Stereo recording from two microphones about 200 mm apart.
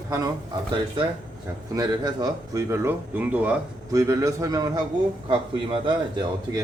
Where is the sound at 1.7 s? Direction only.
20° right (ahead or behind).